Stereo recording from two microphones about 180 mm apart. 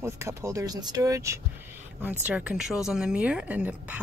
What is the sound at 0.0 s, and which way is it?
Speech, 15° right (ahead or behind).